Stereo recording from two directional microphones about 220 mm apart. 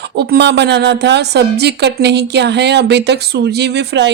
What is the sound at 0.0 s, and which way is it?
A woman's voice, 50° right (ahead or behind).